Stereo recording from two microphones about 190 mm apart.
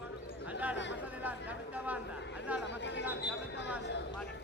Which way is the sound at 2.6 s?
70° left (ahead or behind).